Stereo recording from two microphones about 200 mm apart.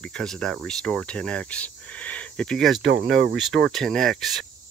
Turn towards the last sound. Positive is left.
turn(degrees=0)  # may be behind; listen again after turning